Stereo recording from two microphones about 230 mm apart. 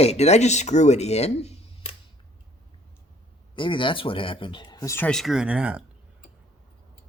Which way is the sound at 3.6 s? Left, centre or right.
Left.